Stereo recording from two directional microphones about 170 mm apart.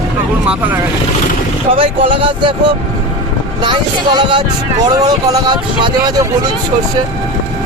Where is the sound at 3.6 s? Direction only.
25° right (ahead or behind).